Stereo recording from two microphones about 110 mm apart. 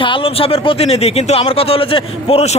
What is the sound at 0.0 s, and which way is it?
A man's voice, 55° left (ahead or behind).